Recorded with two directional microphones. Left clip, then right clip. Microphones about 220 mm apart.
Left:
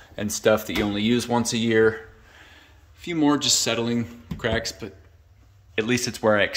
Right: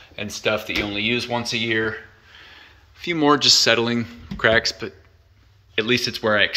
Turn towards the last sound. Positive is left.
turn(degrees=15)  # may be behind; listen again after turning